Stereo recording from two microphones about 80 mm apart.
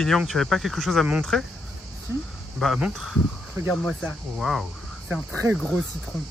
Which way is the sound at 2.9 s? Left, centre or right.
Centre.